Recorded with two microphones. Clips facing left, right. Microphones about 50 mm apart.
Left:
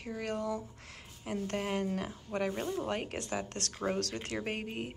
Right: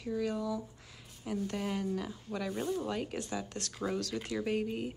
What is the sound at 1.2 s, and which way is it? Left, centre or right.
Speech, left.